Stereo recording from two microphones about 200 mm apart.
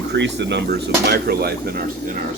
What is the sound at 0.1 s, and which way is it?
Speech, 60° right (ahead or behind).